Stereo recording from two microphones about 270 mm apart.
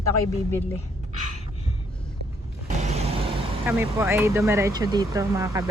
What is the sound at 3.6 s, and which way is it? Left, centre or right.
Speech, centre.